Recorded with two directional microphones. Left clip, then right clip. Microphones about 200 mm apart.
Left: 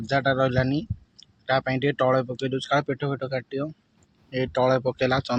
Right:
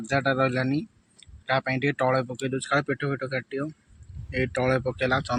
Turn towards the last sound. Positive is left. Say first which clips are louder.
# left 2 dB
turn(degrees=10)  # may be behind; listen again after turning